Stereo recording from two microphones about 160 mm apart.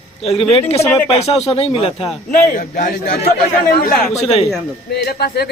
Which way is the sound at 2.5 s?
55° left (ahead or behind).